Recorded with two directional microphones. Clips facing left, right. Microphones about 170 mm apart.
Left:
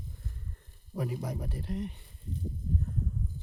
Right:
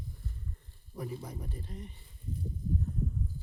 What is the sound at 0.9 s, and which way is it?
Speech, 85° left.